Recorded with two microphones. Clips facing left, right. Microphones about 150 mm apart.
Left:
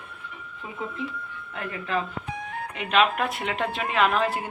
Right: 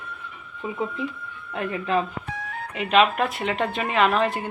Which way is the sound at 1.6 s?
20° right (ahead or behind).